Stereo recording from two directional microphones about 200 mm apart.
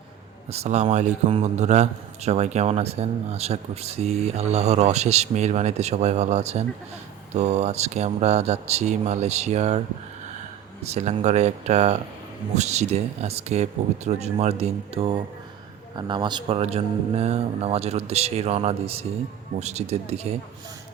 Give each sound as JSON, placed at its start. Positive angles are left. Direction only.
{"t": 0.5, "sound": "a man's voice", "side_deg": -35}
{"t": 10.9, "sound": "a man's voice", "side_deg": -35}